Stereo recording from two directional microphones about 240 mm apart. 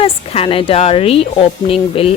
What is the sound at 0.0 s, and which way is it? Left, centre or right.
A woman's voice, left.